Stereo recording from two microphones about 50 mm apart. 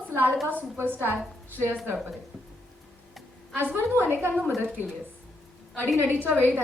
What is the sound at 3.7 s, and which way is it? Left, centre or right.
Speech, right.